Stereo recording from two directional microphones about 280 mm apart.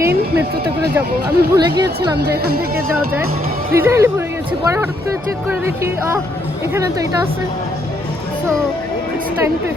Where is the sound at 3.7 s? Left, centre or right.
Centre.